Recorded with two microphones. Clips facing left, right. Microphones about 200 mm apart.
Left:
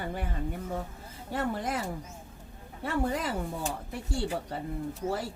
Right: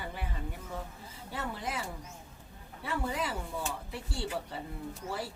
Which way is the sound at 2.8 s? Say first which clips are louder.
Left 5 dB; 45° left (ahead or behind).